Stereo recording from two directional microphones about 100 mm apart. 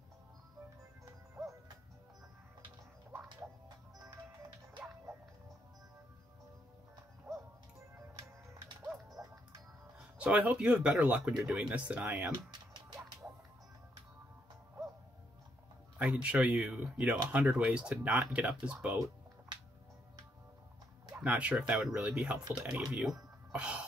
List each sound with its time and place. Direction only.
7.3 s music: centre (ahead or behind)
9.9 s speech: 10° right (ahead or behind)
12.4 s music: 50° right (ahead or behind)
16.0 s speech: 10° right (ahead or behind)
21.1 s speech: 15° right (ahead or behind)